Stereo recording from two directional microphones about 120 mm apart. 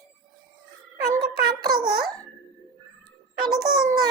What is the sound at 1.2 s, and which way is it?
Music, 40° right (ahead or behind).